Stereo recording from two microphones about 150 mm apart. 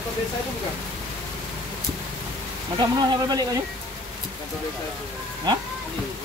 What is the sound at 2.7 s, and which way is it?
Speech, 30° right (ahead or behind).